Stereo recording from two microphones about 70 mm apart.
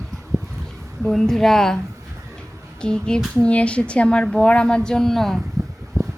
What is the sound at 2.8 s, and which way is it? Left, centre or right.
Speech, centre.